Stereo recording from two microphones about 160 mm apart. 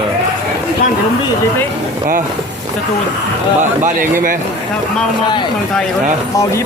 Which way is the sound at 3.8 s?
60° right (ahead or behind).